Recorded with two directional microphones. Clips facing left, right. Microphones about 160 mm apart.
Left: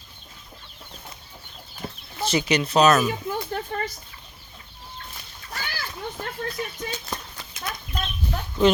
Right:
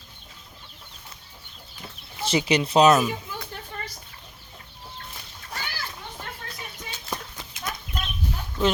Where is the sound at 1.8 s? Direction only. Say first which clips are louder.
Left 9 dB; 45° left (ahead or behind).